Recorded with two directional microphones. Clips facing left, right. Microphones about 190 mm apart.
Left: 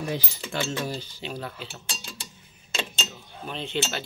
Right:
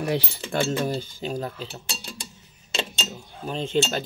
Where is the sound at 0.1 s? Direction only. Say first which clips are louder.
Right 5 dB; 70° right (ahead or behind).